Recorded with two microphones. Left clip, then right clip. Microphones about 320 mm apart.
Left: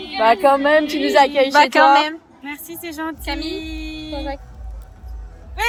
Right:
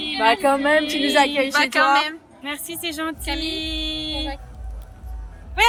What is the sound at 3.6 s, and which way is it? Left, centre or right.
Mantra, centre.